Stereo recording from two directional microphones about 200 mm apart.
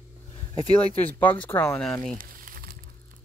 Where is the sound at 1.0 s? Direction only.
10° left (ahead or behind).